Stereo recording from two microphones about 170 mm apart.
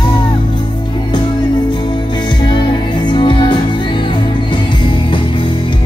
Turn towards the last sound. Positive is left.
turn(degrees=30)  # may be behind; listen again after turning